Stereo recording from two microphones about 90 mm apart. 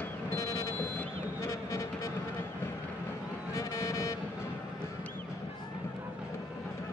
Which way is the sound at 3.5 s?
35° left (ahead or behind).